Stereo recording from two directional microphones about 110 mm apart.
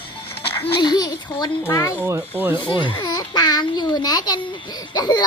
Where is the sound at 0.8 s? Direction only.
40° left (ahead or behind).